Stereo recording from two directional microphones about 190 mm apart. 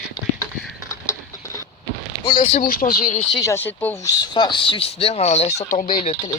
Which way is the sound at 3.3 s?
15° left (ahead or behind).